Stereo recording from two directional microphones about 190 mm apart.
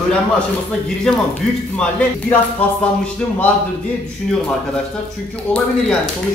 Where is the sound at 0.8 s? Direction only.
Centre (ahead or behind).